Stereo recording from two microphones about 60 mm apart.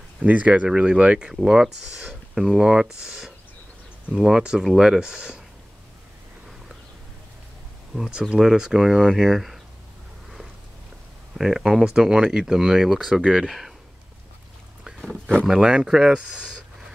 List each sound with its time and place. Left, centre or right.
0.2 s speech: right
1.3 s speech: centre
7.9 s speech: centre
11.3 s speech: centre
15.0 s speech: centre
15.4 s speech: centre